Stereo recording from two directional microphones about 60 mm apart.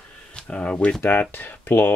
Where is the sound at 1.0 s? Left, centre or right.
Left.